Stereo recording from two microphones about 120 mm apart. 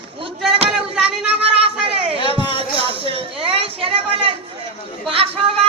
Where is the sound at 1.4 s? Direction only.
55° right (ahead or behind).